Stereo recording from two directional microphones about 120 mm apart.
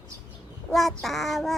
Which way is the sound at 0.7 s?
Centre (ahead or behind).